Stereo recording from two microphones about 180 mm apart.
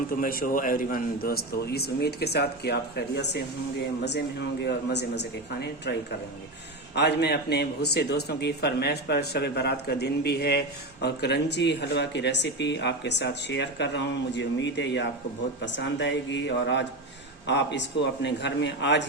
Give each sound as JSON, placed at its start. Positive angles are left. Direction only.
{"t": 0.2, "sound": "a man's voice", "side_deg": 50}
{"t": 4.6, "sound": "speech", "side_deg": 70}
{"t": 6.9, "sound": "a man's voice", "side_deg": 70}